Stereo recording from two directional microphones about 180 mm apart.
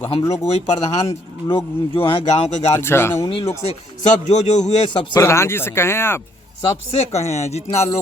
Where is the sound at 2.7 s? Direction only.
15° left (ahead or behind).